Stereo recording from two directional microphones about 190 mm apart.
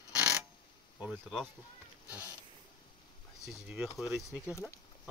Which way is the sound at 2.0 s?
10° right (ahead or behind).